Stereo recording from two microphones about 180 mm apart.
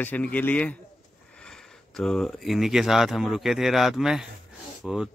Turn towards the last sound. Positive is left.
turn(degrees=-5)  # may be behind; listen again after turning